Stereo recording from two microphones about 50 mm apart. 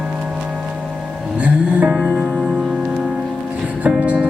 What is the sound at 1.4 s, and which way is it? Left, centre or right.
Music, right.